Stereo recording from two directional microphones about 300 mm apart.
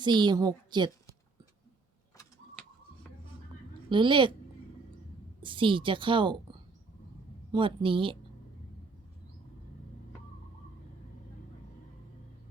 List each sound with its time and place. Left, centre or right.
0.0 s speech: centre
3.8 s speech: centre
5.4 s speech: centre
7.5 s speech: centre